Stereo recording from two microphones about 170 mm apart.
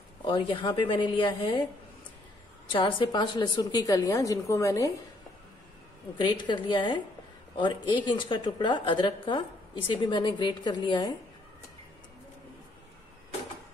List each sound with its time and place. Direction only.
0.2 s a woman's voice: 30° left (ahead or behind)
2.7 s a woman's voice: 30° left (ahead or behind)
6.1 s a woman's voice: 25° left (ahead or behind)